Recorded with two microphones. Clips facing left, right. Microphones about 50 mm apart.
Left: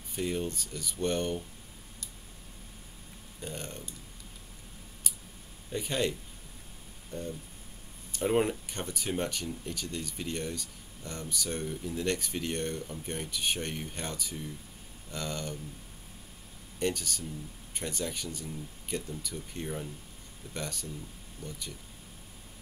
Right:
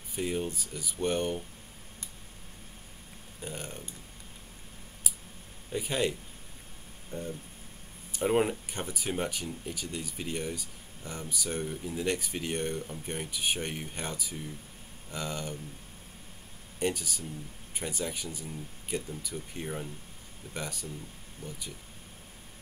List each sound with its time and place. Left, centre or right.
0.1 s speech: centre
3.3 s speech: centre
5.7 s speech: centre
7.1 s a sound: centre
8.1 s speech: centre
16.8 s speech: centre